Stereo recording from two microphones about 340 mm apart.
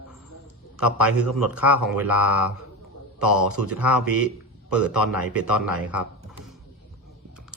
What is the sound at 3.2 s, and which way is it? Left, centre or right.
Speech, right.